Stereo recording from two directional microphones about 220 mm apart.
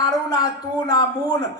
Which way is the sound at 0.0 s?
20° left (ahead or behind).